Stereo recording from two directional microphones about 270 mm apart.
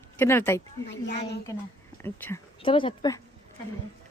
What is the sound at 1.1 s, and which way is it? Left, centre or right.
Speech, left.